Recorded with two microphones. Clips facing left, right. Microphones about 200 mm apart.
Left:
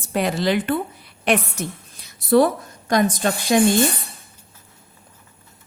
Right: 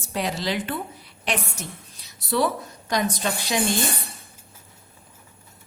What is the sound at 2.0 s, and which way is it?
A woman's voice, 50° left (ahead or behind).